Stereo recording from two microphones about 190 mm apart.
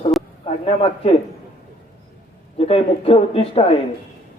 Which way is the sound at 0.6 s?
30° left (ahead or behind).